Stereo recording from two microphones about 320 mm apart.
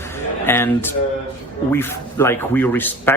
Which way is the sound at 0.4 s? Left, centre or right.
Centre.